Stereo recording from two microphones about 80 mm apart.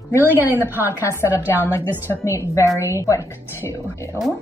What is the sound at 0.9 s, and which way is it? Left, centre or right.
A woman's voice, left.